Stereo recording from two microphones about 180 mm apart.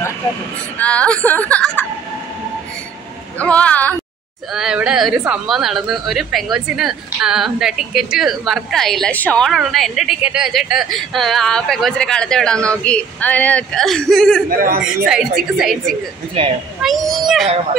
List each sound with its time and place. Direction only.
0.7 s speech: 5° left (ahead or behind)
3.3 s speech: 5° left (ahead or behind)
4.6 s a woman's voice: 5° right (ahead or behind)
14.6 s speech: 50° right (ahead or behind)
15.5 s a woman's voice: centre (ahead or behind)
16.4 s speech: 30° right (ahead or behind)
16.8 s a woman's voice: centre (ahead or behind)